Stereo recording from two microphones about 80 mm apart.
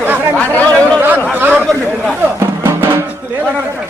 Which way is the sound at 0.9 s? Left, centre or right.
Right.